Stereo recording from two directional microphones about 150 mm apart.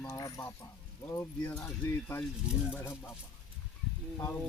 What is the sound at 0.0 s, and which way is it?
Speech, 20° left (ahead or behind).